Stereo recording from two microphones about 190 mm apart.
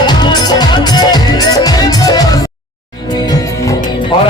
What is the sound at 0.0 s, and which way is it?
Music, 20° left (ahead or behind).